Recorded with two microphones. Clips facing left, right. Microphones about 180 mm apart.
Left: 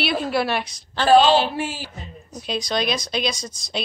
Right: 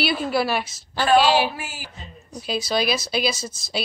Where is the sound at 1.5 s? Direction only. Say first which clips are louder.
Left 8 dB; 30° left (ahead or behind).